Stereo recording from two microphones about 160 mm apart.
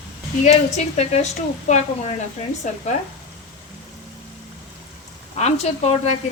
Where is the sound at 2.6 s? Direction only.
50° left (ahead or behind).